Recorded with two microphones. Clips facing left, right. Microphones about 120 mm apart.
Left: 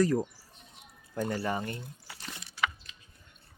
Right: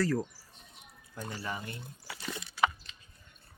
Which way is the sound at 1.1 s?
45° left (ahead or behind).